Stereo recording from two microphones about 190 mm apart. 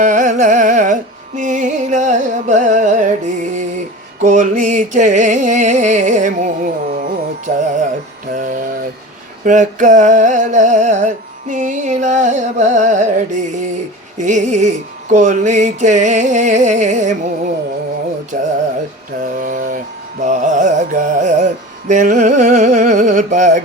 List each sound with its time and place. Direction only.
0.0 s music: 40° right (ahead or behind)
8.3 s a sound: 45° right (ahead or behind)
9.4 s music: 40° right (ahead or behind)
18.3 s music: 45° right (ahead or behind)
19.2 s mantra: 45° right (ahead or behind)
20.2 s music: 40° right (ahead or behind)